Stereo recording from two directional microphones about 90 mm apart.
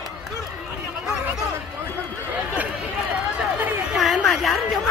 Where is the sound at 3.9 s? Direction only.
5° right (ahead or behind).